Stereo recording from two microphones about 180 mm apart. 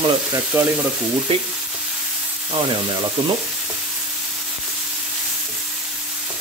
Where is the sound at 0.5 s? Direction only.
10° right (ahead or behind).